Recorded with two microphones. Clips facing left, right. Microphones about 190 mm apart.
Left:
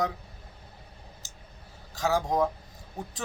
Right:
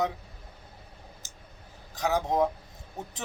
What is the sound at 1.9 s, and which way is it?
Speech, 20° right (ahead or behind).